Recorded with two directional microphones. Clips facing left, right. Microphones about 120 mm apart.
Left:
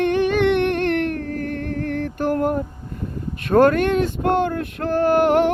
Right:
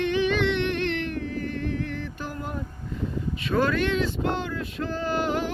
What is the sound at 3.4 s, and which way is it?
Speech, 55° left (ahead or behind).